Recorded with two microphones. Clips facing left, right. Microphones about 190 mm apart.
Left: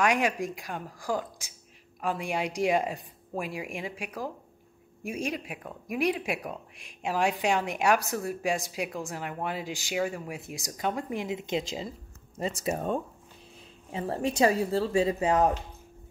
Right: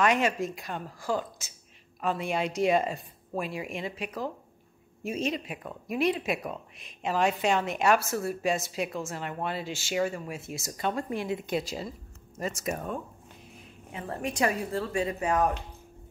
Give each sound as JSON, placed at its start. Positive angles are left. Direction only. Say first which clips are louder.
{"t": 0.0, "sound": "a woman's voice", "louder": "right 1 dB", "side_deg": 15}